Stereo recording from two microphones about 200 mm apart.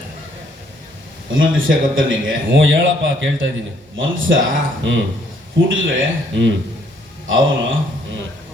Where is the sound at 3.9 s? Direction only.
75° right (ahead or behind).